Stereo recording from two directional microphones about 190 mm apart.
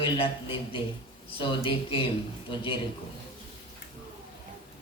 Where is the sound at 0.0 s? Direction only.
25° left (ahead or behind).